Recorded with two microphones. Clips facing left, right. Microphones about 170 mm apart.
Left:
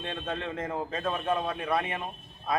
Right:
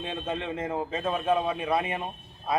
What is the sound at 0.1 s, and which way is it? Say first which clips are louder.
Speech: right 2 dB; 5° right (ahead or behind).